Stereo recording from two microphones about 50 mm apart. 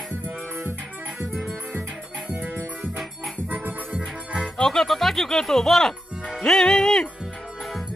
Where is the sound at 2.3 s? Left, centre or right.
Right.